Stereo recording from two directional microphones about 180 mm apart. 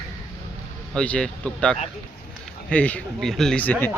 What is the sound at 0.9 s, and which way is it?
A man's voice, 5° left (ahead or behind).